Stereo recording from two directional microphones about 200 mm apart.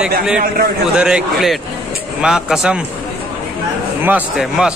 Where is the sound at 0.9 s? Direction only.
5° right (ahead or behind).